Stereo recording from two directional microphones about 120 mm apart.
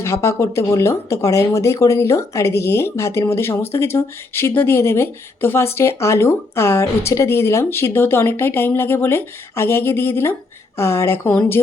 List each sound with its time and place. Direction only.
0.0 s speech: 25° left (ahead or behind)